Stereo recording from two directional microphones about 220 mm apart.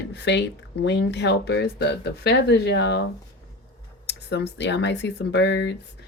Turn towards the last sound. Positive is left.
turn(degrees=55)  # may be behind; listen again after turning